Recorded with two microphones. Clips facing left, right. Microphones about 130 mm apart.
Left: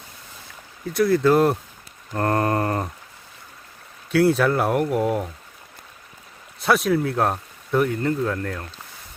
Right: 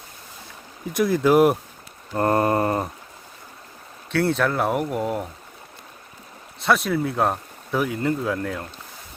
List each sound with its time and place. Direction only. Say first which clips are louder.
0.9 s mantra: even; 15° right (ahead or behind)
4.1 s speech: left 4 dB; centre (ahead or behind)
6.6 s speech: left 1 dB; centre (ahead or behind)